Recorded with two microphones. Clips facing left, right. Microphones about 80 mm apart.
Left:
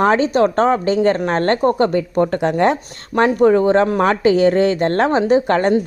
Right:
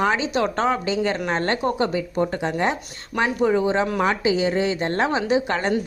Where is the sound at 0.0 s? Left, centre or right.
Left.